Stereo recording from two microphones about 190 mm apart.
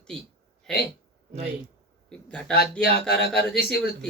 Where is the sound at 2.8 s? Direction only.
55° left (ahead or behind).